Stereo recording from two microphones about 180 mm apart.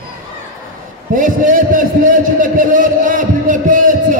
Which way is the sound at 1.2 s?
50° right (ahead or behind).